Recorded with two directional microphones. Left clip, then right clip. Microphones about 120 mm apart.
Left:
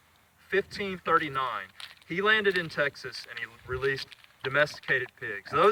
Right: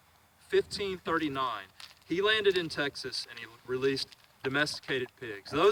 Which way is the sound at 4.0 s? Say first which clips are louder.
Even; 5° left (ahead or behind).